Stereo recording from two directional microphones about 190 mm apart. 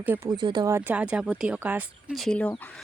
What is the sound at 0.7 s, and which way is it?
Speech, 10° right (ahead or behind).